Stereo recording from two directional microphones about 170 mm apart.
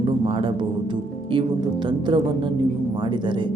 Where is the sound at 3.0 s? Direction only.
30° right (ahead or behind).